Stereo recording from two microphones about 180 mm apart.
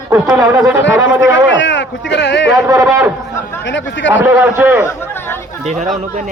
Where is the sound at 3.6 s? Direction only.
90° left.